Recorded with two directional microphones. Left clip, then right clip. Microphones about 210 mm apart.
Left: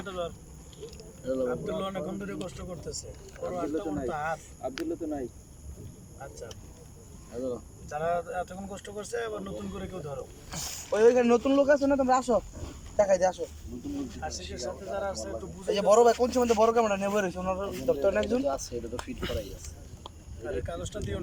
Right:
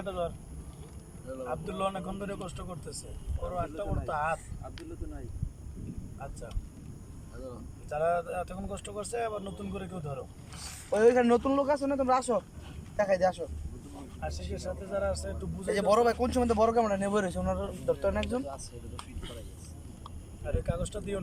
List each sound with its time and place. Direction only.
0.0 s speech: 5° right (ahead or behind)
1.5 s speech: 5° right (ahead or behind)
4.6 s speech: 50° left (ahead or behind)
7.3 s speech: 40° left (ahead or behind)
7.9 s speech: 5° right (ahead or behind)
10.5 s speech: 35° left (ahead or behind)
10.9 s a man's voice: 5° left (ahead or behind)
14.5 s speech: 5° right (ahead or behind)
15.6 s a man's voice: 10° left (ahead or behind)
18.4 s speech: 45° left (ahead or behind)
20.7 s speech: 5° right (ahead or behind)